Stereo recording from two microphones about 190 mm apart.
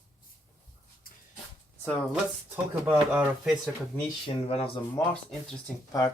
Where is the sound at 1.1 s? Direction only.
50° left (ahead or behind).